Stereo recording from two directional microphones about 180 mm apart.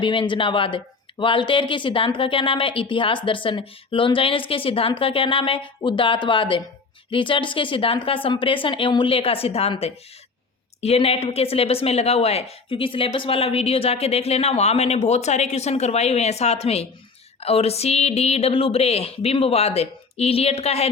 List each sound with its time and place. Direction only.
0.0 s a woman's voice: 25° left (ahead or behind)